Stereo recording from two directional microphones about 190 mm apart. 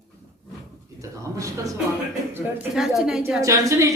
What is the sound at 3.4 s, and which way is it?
Speech, 15° right (ahead or behind).